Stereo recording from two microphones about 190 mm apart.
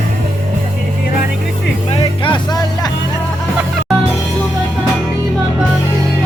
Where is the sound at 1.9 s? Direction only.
25° left (ahead or behind).